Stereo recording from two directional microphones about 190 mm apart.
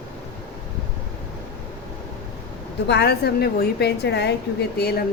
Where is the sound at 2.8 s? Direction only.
60° left (ahead or behind).